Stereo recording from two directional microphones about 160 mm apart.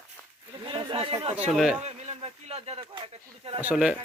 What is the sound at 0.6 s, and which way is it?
Speech, 35° right (ahead or behind).